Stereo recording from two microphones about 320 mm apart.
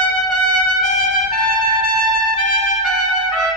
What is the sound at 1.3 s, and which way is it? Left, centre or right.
Trumpet, left.